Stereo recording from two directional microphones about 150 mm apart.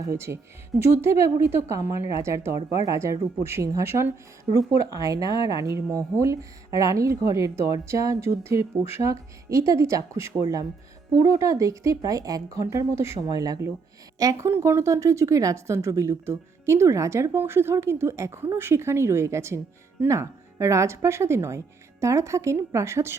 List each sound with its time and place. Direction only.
0.7 s a woman's voice: centre (ahead or behind)
1.2 s a woman's voice: 15° right (ahead or behind)